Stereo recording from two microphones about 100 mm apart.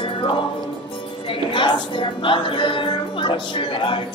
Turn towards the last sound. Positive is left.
turn(degrees=60)  # may be behind; listen again after turning